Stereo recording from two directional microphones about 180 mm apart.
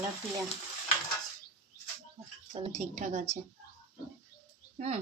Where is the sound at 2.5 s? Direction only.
30° right (ahead or behind).